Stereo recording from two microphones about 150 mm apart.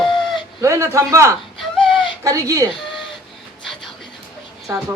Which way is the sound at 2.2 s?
25° right (ahead or behind).